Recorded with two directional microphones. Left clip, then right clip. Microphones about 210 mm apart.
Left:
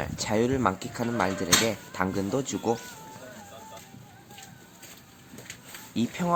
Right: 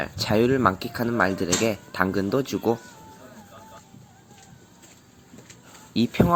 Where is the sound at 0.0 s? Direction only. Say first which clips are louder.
Right 4 dB; 15° right (ahead or behind).